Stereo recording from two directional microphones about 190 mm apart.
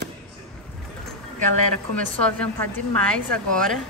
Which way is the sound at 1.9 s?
5° left (ahead or behind).